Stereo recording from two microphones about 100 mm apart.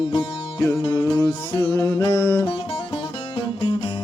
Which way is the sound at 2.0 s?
25° left (ahead or behind).